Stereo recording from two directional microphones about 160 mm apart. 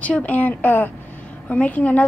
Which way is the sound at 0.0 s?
10° left (ahead or behind).